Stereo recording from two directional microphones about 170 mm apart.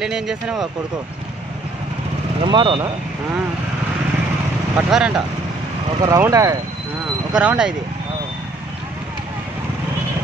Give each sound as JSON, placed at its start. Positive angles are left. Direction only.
{"t": 0.0, "sound": "speech", "side_deg": -5}
{"t": 2.4, "sound": "speech", "side_deg": -30}
{"t": 4.7, "sound": "speech", "side_deg": -5}
{"t": 5.9, "sound": "speech", "side_deg": -20}
{"t": 7.3, "sound": "speech", "side_deg": -5}